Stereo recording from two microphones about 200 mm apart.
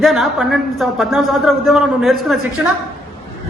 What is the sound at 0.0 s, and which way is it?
A man's voice, centre (ahead or behind).